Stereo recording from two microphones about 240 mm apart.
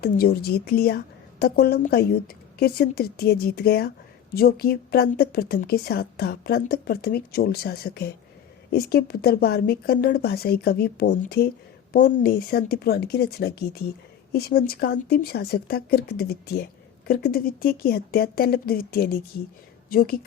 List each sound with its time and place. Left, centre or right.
0.0 s a woman's voice: left